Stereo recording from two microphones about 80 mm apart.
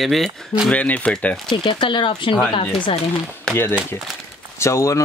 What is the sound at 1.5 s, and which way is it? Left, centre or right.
Speech, left.